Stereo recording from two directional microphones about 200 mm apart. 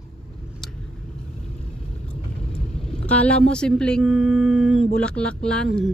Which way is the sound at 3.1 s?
5° left (ahead or behind).